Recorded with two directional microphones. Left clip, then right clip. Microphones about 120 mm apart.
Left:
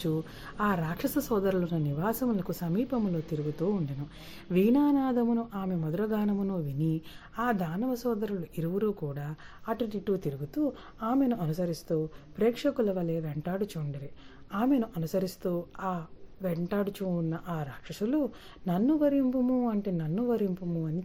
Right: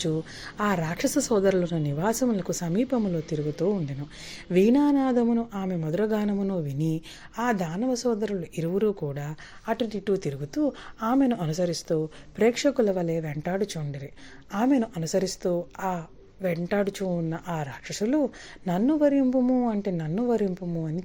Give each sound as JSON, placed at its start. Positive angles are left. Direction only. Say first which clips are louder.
{"t": 0.0, "sound": "a woman's voice", "louder": "right 4 dB", "side_deg": -20}